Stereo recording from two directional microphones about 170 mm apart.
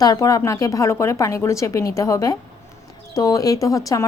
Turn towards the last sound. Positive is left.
turn(degrees=20)  # may be behind; listen again after turning